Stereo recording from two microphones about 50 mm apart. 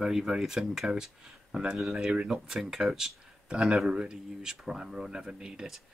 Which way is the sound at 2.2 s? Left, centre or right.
Centre.